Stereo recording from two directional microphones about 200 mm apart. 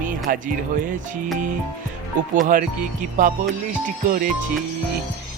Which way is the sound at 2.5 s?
40° right (ahead or behind).